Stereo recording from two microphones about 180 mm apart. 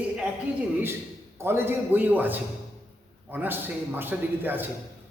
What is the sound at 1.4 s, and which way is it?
A man's voice, 10° right (ahead or behind).